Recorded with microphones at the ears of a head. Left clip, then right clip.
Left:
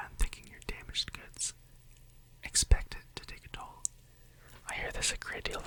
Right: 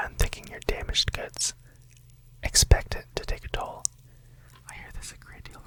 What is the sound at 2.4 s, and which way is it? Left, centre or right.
Speech, right.